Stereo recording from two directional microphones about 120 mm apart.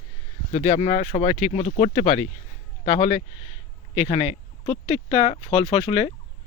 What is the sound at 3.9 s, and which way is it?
Speech, 55° left (ahead or behind).